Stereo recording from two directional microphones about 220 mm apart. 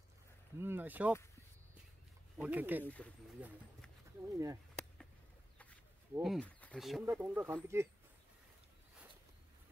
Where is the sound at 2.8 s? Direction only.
5° left (ahead or behind).